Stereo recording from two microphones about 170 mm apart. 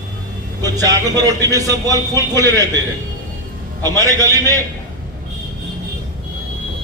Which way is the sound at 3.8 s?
20° right (ahead or behind).